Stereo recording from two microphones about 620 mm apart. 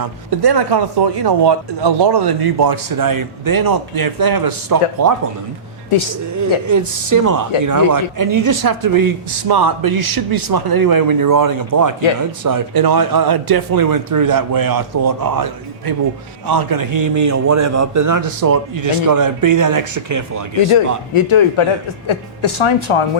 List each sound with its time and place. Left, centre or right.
0.0 s speech: right
6.7 s a man's voice: right
16.5 s a man's voice: right
20.7 s a man's voice: left